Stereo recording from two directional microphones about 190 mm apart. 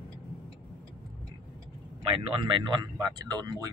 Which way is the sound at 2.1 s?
30° right (ahead or behind).